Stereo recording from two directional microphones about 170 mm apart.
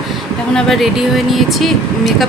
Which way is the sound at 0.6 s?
Centre (ahead or behind).